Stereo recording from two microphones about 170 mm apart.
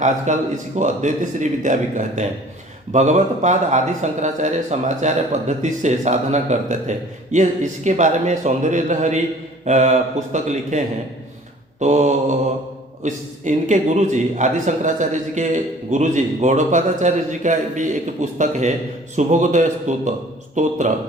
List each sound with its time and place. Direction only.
0.3 s a man's voice: 45° right (ahead or behind)